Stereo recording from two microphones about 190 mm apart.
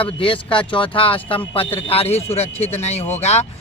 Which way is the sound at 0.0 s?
25° left (ahead or behind).